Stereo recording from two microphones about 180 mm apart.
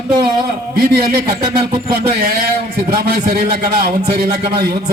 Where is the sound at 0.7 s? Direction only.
60° right (ahead or behind).